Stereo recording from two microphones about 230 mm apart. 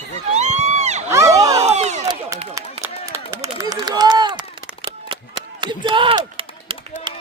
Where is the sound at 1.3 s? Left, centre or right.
Centre.